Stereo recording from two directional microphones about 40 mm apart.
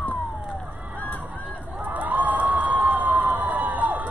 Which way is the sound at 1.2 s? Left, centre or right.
Right.